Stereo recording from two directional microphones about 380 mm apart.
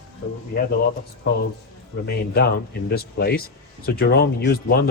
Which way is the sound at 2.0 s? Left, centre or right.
Left.